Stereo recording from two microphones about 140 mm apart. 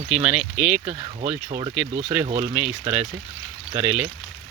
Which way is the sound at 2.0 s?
10° right (ahead or behind).